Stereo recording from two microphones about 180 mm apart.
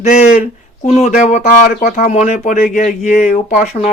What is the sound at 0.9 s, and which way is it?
Speech, 40° left (ahead or behind).